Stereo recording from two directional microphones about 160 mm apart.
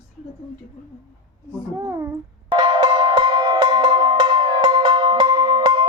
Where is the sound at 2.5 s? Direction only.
30° right (ahead or behind).